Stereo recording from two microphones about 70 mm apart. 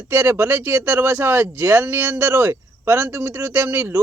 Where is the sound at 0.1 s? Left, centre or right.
Right.